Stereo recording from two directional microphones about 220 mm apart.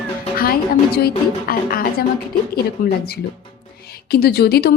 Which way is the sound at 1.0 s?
40° left (ahead or behind).